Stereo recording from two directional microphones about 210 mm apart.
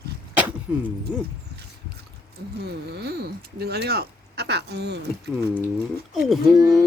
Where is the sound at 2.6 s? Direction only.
50° right (ahead or behind).